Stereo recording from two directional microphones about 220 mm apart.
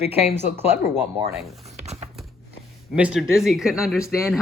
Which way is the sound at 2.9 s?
5° right (ahead or behind).